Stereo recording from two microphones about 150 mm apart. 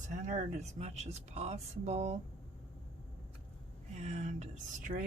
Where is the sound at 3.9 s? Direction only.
50° right (ahead or behind).